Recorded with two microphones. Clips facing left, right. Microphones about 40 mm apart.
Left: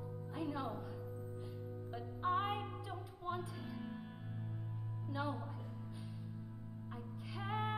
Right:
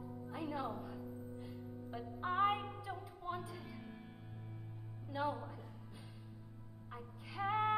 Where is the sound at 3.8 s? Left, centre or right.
Centre.